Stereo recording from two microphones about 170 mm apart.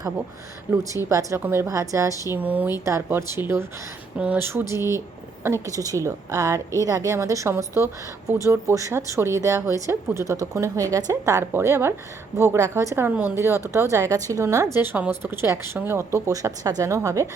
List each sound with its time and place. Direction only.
0.9 s a woman's voice: 20° right (ahead or behind)